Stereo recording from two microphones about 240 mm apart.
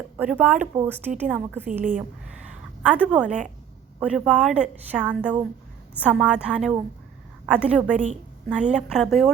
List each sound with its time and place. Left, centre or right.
0.2 s a woman's voice: centre
1.8 s a woman's voice: right
2.5 s a sound: centre
4.0 s a woman's voice: centre
7.9 s a woman's voice: right
8.4 s a woman's voice: centre